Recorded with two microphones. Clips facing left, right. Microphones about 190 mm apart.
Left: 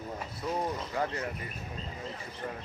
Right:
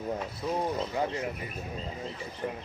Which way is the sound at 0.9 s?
15° right (ahead or behind).